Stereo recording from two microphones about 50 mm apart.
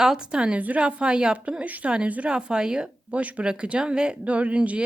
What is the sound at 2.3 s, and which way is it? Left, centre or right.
Speech, centre.